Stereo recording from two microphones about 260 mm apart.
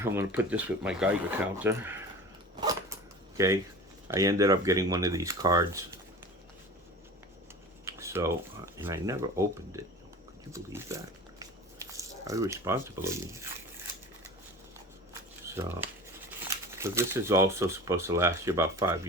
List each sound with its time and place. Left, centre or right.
0.0 s speech: centre
2.6 s a sound: centre
4.1 s speech: centre
7.9 s speech: centre
15.4 s speech: centre